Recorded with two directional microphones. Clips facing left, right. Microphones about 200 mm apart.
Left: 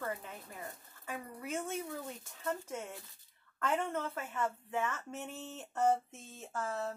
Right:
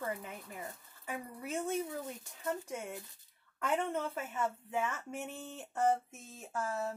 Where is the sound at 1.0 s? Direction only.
20° right (ahead or behind).